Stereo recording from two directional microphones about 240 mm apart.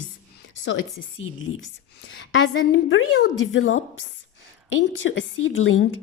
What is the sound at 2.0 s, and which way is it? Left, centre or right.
A woman's voice, left.